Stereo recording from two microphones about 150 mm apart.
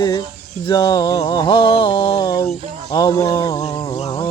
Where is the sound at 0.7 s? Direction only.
25° left (ahead or behind).